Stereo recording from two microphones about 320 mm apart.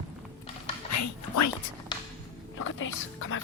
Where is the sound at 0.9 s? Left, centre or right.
Left.